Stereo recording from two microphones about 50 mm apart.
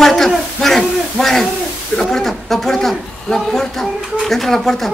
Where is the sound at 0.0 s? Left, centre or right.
Centre.